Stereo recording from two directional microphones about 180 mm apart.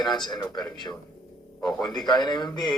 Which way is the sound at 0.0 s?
25° left (ahead or behind).